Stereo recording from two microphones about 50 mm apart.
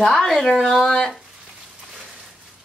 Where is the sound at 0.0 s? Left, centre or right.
Centre.